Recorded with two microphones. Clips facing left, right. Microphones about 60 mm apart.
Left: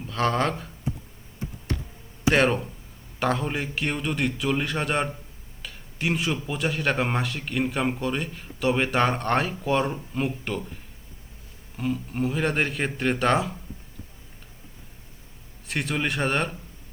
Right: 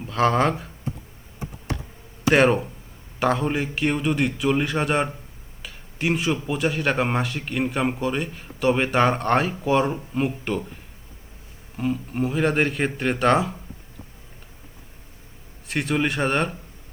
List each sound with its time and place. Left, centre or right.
0.0 s speech: centre
2.3 s speech: centre
5.6 s a sound: centre
6.4 s speech: centre
11.8 s speech: centre
15.6 s speech: centre